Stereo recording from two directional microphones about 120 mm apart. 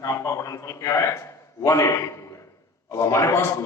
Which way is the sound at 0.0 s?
25° left (ahead or behind).